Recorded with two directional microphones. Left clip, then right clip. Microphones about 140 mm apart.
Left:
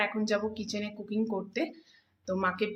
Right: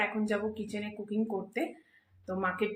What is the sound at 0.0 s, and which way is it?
Speech, 25° left (ahead or behind).